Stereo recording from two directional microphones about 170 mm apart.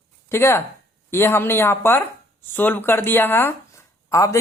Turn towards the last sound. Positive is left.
turn(degrees=15)  # may be behind; listen again after turning